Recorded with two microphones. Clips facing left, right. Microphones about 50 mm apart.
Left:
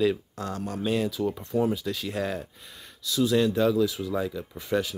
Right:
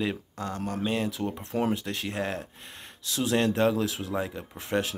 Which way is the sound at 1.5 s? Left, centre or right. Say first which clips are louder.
Left 1 dB; right.